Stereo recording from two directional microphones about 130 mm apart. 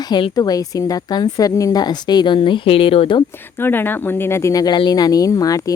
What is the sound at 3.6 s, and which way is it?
Speech, 15° left (ahead or behind).